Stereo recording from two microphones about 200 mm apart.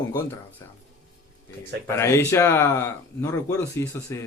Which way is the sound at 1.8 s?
15° left (ahead or behind).